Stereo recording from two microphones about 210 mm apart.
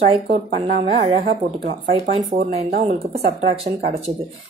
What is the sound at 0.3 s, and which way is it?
Speech, 40° right (ahead or behind).